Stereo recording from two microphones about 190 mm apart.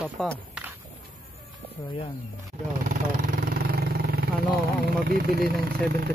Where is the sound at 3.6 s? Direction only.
55° right (ahead or behind).